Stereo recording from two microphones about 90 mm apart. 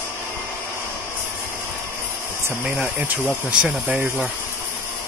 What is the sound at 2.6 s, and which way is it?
Speech, 15° right (ahead or behind).